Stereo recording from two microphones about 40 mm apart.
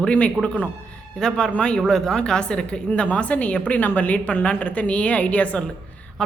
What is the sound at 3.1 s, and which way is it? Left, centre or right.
A woman's voice, left.